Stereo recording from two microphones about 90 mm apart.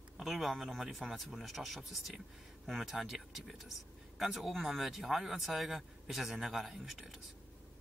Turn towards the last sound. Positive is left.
turn(degrees=0)  # may be behind; listen again after turning